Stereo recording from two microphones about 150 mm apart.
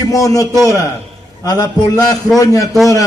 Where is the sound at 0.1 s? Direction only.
25° left (ahead or behind).